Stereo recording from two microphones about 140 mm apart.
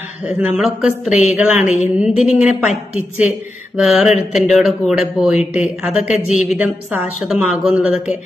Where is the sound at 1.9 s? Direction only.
10° right (ahead or behind).